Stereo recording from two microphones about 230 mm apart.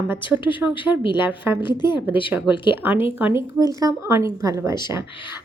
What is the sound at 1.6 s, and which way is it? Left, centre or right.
Speech, centre.